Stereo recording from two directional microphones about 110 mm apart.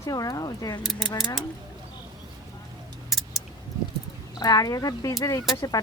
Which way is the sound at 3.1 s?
Centre (ahead or behind).